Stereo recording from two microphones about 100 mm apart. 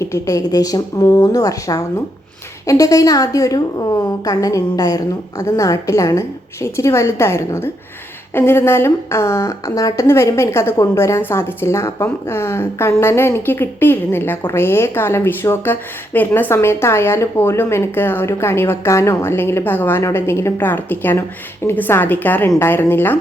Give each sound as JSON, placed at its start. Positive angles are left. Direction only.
{"t": 0.0, "sound": "a woman's voice", "side_deg": 30}